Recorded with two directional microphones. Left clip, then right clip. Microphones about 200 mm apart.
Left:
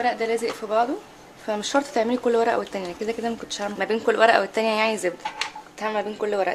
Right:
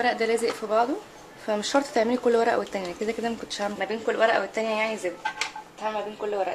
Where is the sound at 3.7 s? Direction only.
25° left (ahead or behind).